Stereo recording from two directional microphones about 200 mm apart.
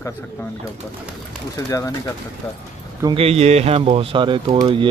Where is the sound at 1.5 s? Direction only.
15° left (ahead or behind).